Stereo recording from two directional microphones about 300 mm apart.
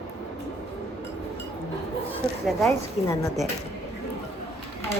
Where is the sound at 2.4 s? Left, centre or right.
Centre.